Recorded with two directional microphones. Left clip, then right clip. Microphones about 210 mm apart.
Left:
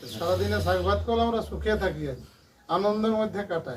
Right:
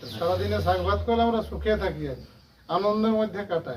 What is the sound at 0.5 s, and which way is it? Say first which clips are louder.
A man's voice: right 1 dB; centre (ahead or behind).